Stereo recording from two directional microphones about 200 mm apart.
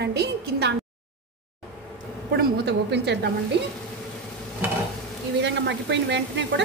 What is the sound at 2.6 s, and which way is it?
Sizzle, 60° right (ahead or behind).